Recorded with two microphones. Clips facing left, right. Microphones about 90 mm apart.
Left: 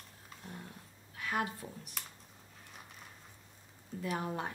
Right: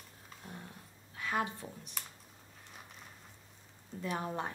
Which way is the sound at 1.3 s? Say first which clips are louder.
Right 1 dB; 25° right (ahead or behind).